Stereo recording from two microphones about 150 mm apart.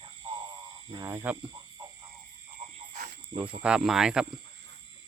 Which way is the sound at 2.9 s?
70° right (ahead or behind).